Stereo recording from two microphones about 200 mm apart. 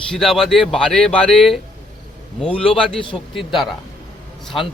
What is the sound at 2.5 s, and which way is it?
Speech, 25° left (ahead or behind).